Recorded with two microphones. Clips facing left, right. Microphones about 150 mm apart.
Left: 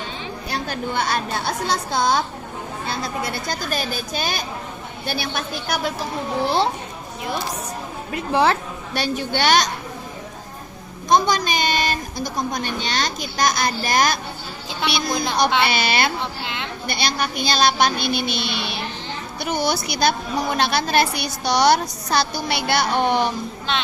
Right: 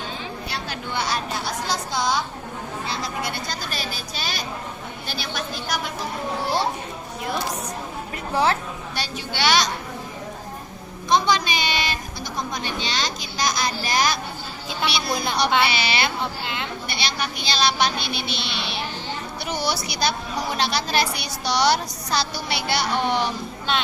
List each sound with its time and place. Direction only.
0.5 s a woman's voice: 50° left (ahead or behind)
8.1 s a woman's voice: 75° left (ahead or behind)
9.0 s a woman's voice: 50° left (ahead or behind)
11.1 s a woman's voice: 45° left (ahead or behind)
16.4 s a woman's voice: centre (ahead or behind)
16.8 s a woman's voice: 45° left (ahead or behind)